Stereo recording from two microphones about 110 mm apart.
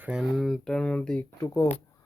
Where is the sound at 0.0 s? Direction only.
5° right (ahead or behind); by 1.3 s 10° left (ahead or behind).